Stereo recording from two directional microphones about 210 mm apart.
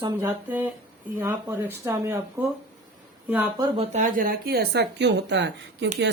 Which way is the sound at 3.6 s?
30° right (ahead or behind).